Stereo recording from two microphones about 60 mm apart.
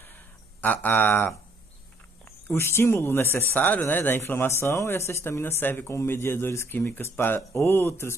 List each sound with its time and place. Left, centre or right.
0.6 s speech: left
2.4 s speech: left
3.5 s speech: left
5.9 s speech: left